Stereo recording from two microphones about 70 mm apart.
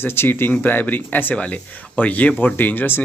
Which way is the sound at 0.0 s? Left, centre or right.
Left.